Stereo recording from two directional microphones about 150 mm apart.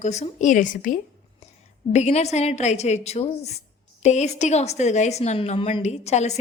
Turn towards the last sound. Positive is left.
turn(degrees=50)  # may be behind; listen again after turning